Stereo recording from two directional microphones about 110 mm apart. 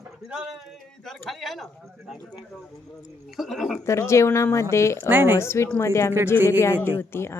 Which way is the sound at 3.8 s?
25° left (ahead or behind).